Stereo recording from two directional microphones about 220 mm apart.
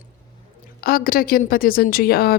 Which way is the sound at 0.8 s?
40° left (ahead or behind).